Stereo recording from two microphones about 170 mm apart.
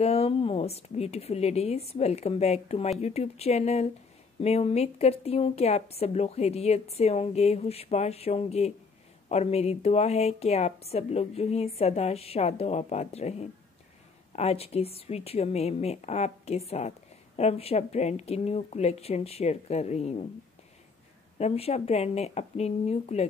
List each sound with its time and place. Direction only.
0.0 s a woman's voice: 35° left (ahead or behind)
21.4 s a woman's voice: 35° left (ahead or behind)